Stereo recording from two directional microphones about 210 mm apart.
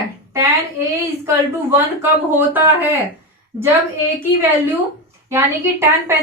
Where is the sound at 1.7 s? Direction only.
10° right (ahead or behind).